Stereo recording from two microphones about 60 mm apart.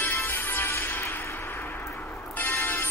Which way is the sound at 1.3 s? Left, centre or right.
Left.